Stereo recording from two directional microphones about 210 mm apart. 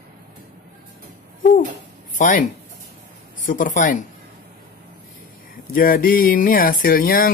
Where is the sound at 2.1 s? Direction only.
40° left (ahead or behind).